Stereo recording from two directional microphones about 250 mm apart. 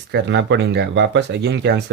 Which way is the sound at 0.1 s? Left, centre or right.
Right.